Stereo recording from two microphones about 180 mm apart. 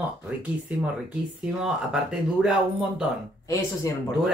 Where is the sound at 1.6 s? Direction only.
5° right (ahead or behind).